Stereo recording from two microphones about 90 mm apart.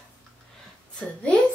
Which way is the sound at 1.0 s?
15° left (ahead or behind).